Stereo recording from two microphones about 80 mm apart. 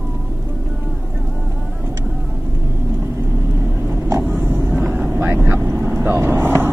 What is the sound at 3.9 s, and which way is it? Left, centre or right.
Vehicle, right.